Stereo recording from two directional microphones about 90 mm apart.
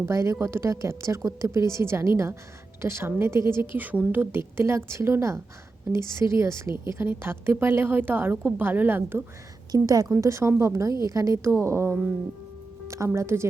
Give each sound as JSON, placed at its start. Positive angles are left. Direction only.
{"t": 0.0, "sound": "a woman's voice", "side_deg": -35}
{"t": 9.7, "sound": "a woman's voice", "side_deg": -45}
{"t": 13.1, "sound": "a woman's voice", "side_deg": -30}